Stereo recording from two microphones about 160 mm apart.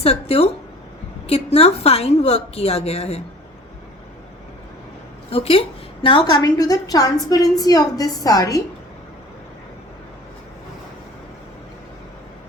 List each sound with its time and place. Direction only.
0.0 s a woman's voice: 40° left (ahead or behind)
5.3 s a woman's voice: 35° left (ahead or behind); by 8.6 s 20° left (ahead or behind)